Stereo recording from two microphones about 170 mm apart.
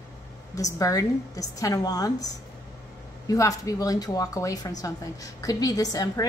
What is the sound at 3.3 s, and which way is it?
A woman's voice, 20° left (ahead or behind).